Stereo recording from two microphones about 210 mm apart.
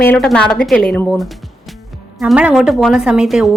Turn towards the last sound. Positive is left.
turn(degrees=0)  # may be behind; listen again after turning